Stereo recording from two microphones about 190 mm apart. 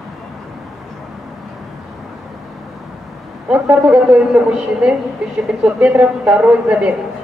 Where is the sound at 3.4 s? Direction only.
10° right (ahead or behind).